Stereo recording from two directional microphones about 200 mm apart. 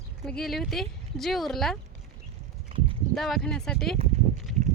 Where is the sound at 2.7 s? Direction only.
30° right (ahead or behind).